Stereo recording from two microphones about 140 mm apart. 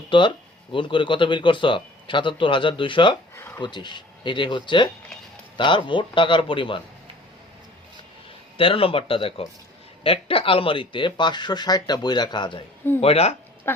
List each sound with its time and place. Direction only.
0.1 s speech: 35° left (ahead or behind)
3.3 s speech: 15° left (ahead or behind)
3.6 s speech: 35° left (ahead or behind)
8.5 s speech: 40° left (ahead or behind)
13.0 s speech: 45° left (ahead or behind)
13.7 s livestock: 15° left (ahead or behind)